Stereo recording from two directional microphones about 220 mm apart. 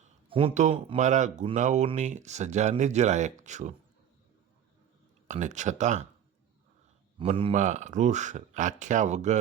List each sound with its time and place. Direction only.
0.0 s speech: 25° right (ahead or behind)
5.3 s speech: 35° right (ahead or behind)
7.2 s speech: 25° right (ahead or behind)